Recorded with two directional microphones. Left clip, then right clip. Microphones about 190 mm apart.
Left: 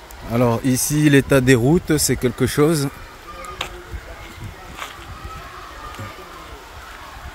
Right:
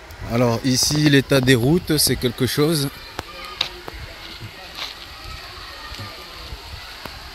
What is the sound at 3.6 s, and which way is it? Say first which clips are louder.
Music: right 5 dB; centre (ahead or behind).